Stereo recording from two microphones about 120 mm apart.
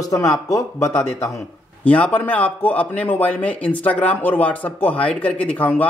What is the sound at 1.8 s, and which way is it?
A man's voice, 10° left (ahead or behind).